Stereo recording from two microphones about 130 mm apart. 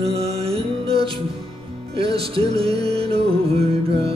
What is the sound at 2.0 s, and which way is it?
Music, 45° right (ahead or behind).